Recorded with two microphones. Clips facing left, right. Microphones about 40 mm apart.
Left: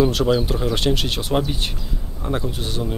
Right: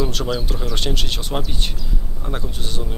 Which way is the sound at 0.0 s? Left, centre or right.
Centre.